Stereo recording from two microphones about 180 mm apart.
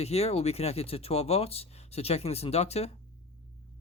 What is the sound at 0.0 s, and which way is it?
Speech, 35° left (ahead or behind).